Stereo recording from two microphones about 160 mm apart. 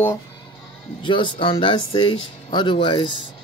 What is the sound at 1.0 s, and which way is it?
Speech, 30° left (ahead or behind).